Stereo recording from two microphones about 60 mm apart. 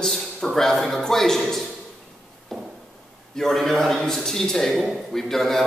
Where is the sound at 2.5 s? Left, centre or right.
Centre.